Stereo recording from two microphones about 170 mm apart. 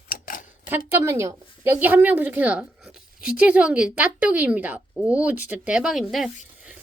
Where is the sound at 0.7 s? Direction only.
15° right (ahead or behind).